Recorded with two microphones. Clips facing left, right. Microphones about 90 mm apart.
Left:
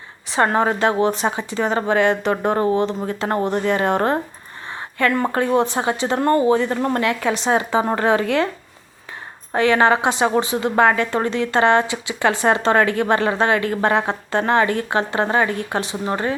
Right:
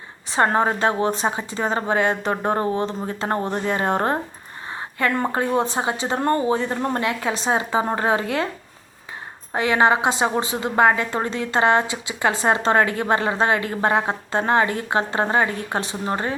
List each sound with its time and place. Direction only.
0.3 s a woman's voice: 30° right (ahead or behind)
9.6 s a woman's voice: 20° right (ahead or behind)